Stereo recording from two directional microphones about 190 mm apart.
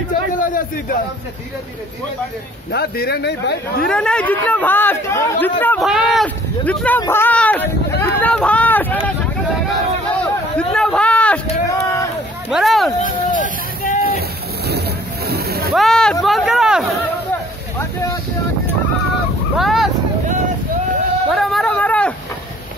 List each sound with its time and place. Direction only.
0.4 s a man's voice: 45° left (ahead or behind)
2.7 s speech: 55° left (ahead or behind)
3.8 s speech: 5° left (ahead or behind)
10.2 s a sound: 5° left (ahead or behind)
11.6 s run: 15° left (ahead or behind)
12.4 s speech: centre (ahead or behind)
13.0 s speech: 45° left (ahead or behind)
15.2 s boat: 55° right (ahead or behind)
15.7 s speech: centre (ahead or behind)
19.5 s vehicle: centre (ahead or behind)
21.3 s a sound: centre (ahead or behind)